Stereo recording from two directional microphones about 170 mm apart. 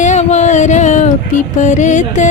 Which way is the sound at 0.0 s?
45° left (ahead or behind).